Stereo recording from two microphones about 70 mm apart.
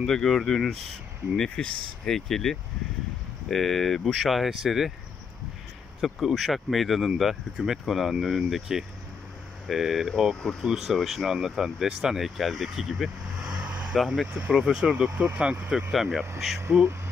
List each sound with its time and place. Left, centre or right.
0.0 s speech: centre
5.9 s speech: centre
13.9 s speech: centre
15.9 s speech: centre
16.5 s speech: right